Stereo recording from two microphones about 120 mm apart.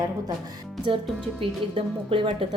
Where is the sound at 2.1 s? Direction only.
45° right (ahead or behind).